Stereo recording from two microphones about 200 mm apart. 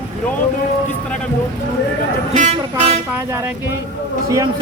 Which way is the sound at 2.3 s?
35° right (ahead or behind).